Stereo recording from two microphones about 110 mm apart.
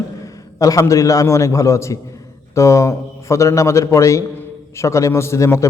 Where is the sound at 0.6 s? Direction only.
30° left (ahead or behind).